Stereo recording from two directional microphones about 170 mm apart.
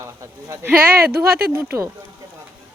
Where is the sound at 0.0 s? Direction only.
15° right (ahead or behind).